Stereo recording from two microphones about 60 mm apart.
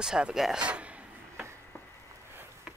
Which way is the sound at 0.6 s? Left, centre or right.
Centre.